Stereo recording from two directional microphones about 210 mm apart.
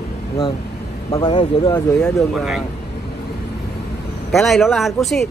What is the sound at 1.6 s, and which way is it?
Speech, 15° left (ahead or behind).